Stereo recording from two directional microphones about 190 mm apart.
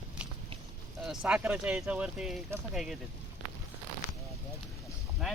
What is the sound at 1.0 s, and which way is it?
Speech, 5° right (ahead or behind).